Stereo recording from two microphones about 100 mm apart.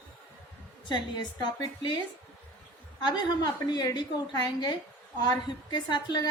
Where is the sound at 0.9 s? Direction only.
45° left (ahead or behind).